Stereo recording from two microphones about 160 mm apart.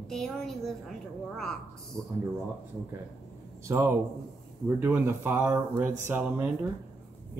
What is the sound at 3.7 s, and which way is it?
Speech, 15° right (ahead or behind).